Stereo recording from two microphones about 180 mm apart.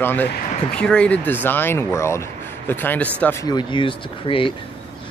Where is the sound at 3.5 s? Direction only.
25° left (ahead or behind).